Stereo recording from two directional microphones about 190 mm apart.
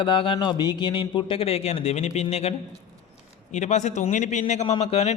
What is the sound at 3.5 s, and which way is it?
A man's voice, 40° left (ahead or behind).